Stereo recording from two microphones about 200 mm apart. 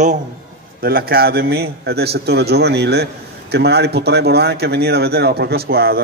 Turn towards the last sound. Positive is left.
turn(degrees=-50)  # may be behind; listen again after turning